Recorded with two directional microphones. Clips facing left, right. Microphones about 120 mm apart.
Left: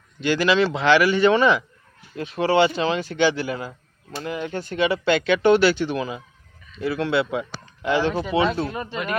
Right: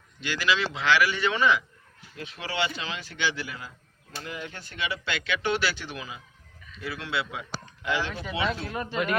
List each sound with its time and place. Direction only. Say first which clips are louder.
0.2 s speech: left 8 dB; 45° left (ahead or behind)
6.7 s speech: left 10 dB; 40° left (ahead or behind)
7.0 s speech: left 10 dB; 55° left (ahead or behind)
7.8 s speech: left 9 dB; 35° left (ahead or behind)
8.7 s speech: left 2 dB; 5° left (ahead or behind)